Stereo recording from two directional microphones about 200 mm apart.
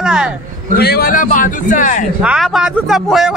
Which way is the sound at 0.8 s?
50° left (ahead or behind).